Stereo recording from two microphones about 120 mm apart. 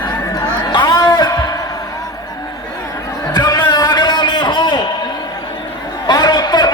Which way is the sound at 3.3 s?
30° left (ahead or behind).